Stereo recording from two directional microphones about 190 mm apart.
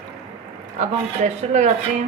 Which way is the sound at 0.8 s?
40° right (ahead or behind).